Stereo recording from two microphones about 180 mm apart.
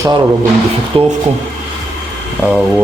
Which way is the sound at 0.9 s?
30° right (ahead or behind).